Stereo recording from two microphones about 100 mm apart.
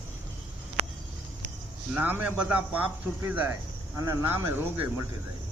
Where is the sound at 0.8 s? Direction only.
90° right.